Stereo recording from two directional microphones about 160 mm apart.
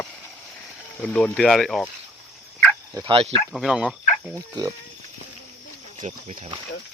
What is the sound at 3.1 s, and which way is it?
Speech, 35° right (ahead or behind).